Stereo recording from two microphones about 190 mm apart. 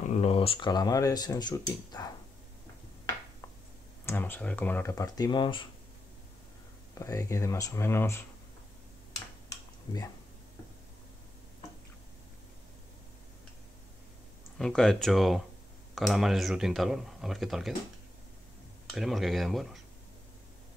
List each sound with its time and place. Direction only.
0.1 s speech: 30° left (ahead or behind)
4.0 s speech: 10° left (ahead or behind)
7.0 s speech: 15° left (ahead or behind)
14.6 s speech: 5° left (ahead or behind)
18.9 s speech: centre (ahead or behind)